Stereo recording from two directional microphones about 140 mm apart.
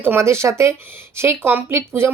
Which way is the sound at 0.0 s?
15° right (ahead or behind).